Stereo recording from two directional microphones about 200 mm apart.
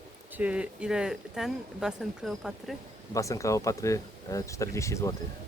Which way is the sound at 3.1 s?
15° left (ahead or behind).